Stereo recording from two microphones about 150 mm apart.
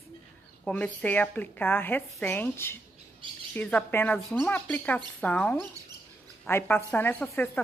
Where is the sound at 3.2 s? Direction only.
30° right (ahead or behind).